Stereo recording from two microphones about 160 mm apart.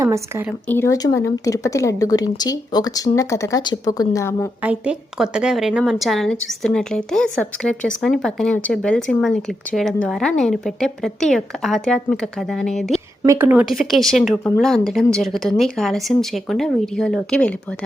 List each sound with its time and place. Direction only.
0.0 s speech: 20° right (ahead or behind)
0.7 s speech: 15° left (ahead or behind)
4.6 s a woman's voice: 5° right (ahead or behind)
13.2 s a woman's voice: 20° right (ahead or behind)
13.5 s speech: 10° right (ahead or behind)
13.7 s a woman's voice: centre (ahead or behind)